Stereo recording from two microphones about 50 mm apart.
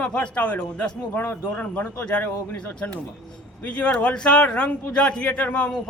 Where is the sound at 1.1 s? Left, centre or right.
Left.